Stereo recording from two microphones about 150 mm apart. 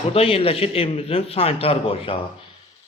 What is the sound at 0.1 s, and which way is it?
A man's voice, 40° left (ahead or behind).